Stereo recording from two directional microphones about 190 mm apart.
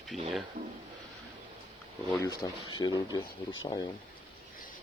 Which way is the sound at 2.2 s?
20° left (ahead or behind).